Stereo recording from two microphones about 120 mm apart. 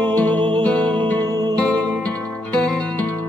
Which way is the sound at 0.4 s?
45° right (ahead or behind).